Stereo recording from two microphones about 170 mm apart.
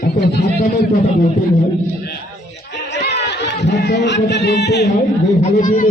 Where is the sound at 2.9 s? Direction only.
80° left.